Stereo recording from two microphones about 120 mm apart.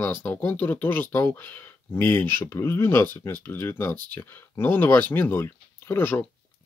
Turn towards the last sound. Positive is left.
turn(degrees=15)  # may be behind; listen again after turning